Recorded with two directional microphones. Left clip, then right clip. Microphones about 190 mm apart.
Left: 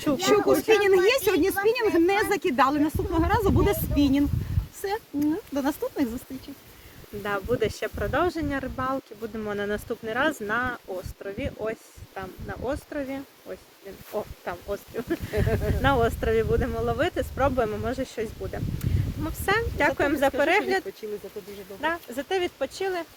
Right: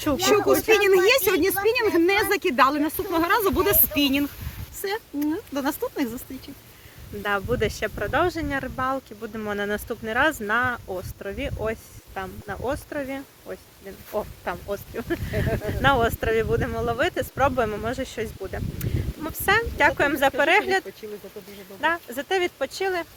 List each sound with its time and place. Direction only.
0.5 s speech: 25° right (ahead or behind)
0.8 s speech: 10° left (ahead or behind)
7.2 s speech: 5° right (ahead or behind)
10.4 s speech: 25° right (ahead or behind)
14.7 s speech: 5° right (ahead or behind)
15.4 s speech: 55° left (ahead or behind)
15.8 s speech: 5° right (ahead or behind)
21.8 s speech: 10° right (ahead or behind)